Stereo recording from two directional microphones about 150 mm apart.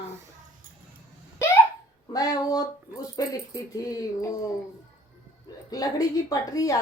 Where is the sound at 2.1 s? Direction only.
25° left (ahead or behind).